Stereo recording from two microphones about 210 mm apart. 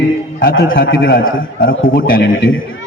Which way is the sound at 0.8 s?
50° left (ahead or behind).